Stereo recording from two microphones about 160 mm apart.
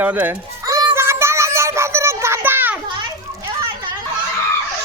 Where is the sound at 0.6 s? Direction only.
20° right (ahead or behind).